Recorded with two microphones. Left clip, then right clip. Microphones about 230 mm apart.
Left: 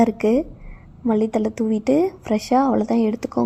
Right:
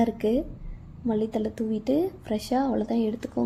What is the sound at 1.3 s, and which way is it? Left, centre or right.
A woman's voice, left.